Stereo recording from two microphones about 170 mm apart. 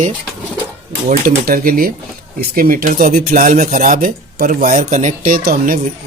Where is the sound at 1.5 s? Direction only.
55° right (ahead or behind).